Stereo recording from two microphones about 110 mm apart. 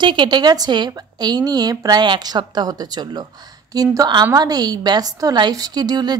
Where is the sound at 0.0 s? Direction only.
45° right (ahead or behind).